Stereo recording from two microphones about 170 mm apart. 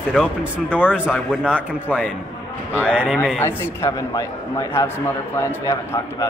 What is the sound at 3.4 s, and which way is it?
A man's voice, 15° left (ahead or behind).